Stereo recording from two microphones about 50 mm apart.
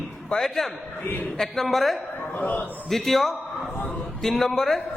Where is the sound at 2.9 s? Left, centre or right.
Centre.